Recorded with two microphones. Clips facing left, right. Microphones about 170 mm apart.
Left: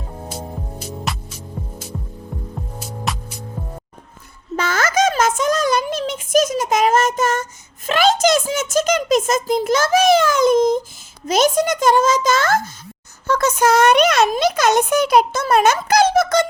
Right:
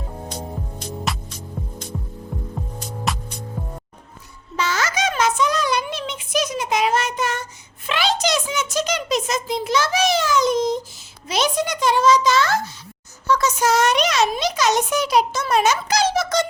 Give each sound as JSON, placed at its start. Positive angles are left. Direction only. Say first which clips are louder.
{"t": 0.3, "sound": "music", "louder": "left 2 dB", "side_deg": 5}
{"t": 1.9, "sound": "hum", "louder": "right 1 dB", "side_deg": 0}
{"t": 2.7, "sound": "music", "louder": "even", "side_deg": 5}
{"t": 4.5, "sound": "a sound", "louder": "left 5 dB", "side_deg": 50}